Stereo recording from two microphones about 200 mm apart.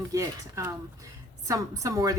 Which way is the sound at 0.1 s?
15° right (ahead or behind).